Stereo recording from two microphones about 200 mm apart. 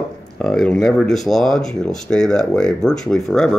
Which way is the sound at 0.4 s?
5° left (ahead or behind).